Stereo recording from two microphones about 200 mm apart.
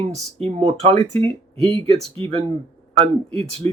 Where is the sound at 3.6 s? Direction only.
35° right (ahead or behind).